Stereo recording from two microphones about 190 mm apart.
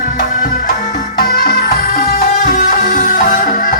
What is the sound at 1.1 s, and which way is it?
Music, 50° left (ahead or behind).